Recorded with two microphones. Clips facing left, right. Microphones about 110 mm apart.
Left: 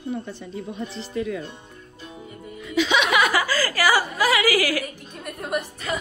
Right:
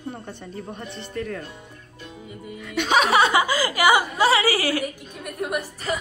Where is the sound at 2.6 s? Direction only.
60° right (ahead or behind).